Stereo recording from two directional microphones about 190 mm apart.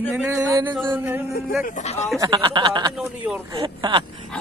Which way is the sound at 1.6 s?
40° left (ahead or behind).